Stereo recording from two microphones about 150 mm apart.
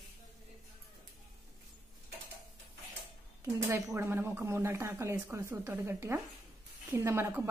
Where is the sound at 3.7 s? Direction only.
20° right (ahead or behind).